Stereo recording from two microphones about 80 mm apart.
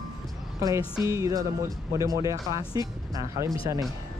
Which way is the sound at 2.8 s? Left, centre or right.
Left.